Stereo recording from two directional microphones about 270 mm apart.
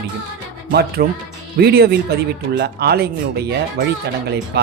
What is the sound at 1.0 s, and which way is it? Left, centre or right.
Speech, right.